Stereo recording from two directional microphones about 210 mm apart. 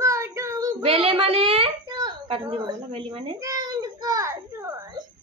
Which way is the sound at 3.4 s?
15° right (ahead or behind).